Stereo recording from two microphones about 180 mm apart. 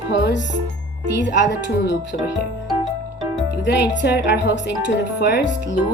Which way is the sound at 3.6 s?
75° left (ahead or behind).